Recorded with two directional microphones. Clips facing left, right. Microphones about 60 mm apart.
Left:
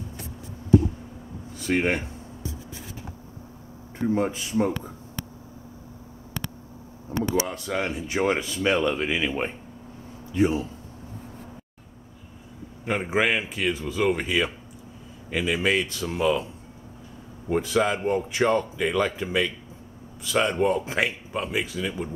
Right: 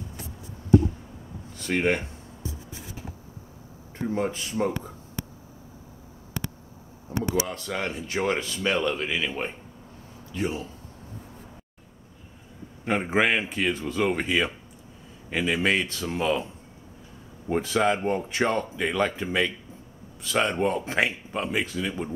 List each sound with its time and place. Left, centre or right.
1.6 s speech: centre
4.1 s speech: centre
7.4 s speech: centre
12.8 s speech: centre
17.6 s speech: centre